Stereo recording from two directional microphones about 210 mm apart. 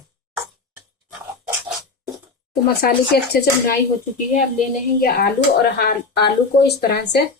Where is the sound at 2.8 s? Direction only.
45° left (ahead or behind).